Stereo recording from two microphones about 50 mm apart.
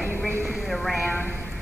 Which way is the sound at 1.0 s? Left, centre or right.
Left.